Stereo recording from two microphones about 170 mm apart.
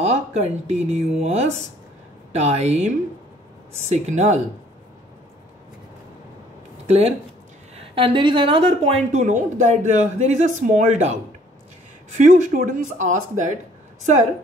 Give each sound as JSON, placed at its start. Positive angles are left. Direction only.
{"t": 0.0, "sound": "a woman's voice", "side_deg": -40}
{"t": 2.3, "sound": "a woman's voice", "side_deg": -40}
{"t": 6.9, "sound": "a woman's voice", "side_deg": -40}